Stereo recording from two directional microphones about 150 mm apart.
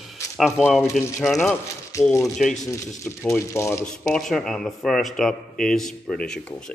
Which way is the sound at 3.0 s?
15° left (ahead or behind).